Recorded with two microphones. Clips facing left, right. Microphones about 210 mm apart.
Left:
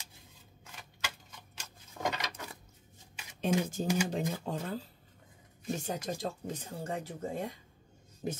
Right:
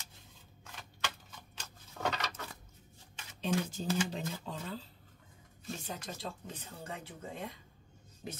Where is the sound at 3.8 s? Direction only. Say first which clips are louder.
Left 4 dB; 50° left (ahead or behind).